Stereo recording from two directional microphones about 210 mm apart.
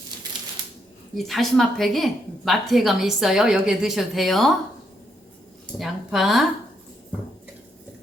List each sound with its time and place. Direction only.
1.1 s a woman's voice: centre (ahead or behind)
5.8 s speech: centre (ahead or behind)